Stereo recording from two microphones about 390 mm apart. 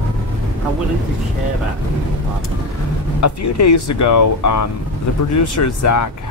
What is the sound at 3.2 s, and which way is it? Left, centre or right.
Speech, left.